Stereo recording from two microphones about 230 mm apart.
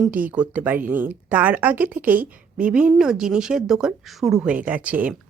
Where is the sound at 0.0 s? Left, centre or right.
Centre.